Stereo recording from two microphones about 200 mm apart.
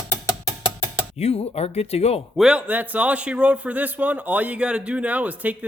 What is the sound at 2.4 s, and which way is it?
A man's voice, 5° right (ahead or behind).